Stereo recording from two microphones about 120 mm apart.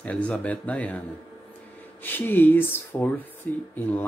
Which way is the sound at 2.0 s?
15° left (ahead or behind).